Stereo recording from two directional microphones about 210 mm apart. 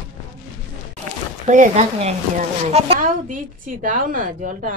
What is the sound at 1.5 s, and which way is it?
A woman's voice, 35° right (ahead or behind).